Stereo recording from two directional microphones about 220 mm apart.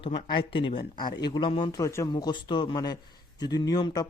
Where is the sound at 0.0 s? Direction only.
25° left (ahead or behind).